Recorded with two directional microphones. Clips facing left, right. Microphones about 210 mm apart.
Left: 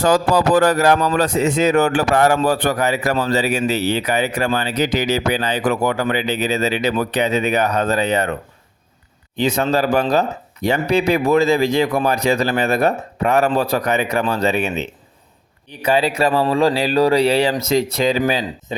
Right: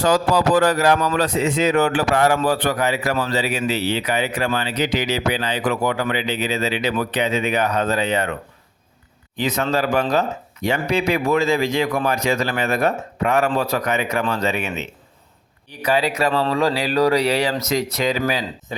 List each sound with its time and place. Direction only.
0.0 s a man's voice: 45° left (ahead or behind)
9.3 s a man's voice: 30° left (ahead or behind)